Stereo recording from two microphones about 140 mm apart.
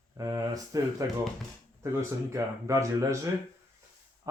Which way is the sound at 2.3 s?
20° right (ahead or behind).